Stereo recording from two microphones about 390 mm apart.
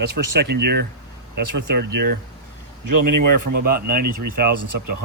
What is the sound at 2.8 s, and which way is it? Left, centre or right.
Speech, right.